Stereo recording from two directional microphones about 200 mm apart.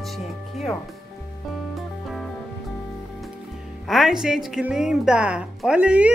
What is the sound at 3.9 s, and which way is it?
A woman's voice, centre (ahead or behind).